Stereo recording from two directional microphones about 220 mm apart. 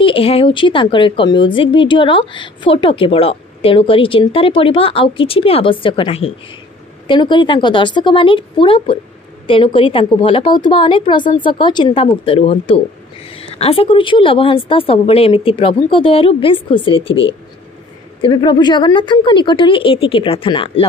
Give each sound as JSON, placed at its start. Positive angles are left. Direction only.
{"t": 0.0, "sound": "a woman's voice", "side_deg": 25}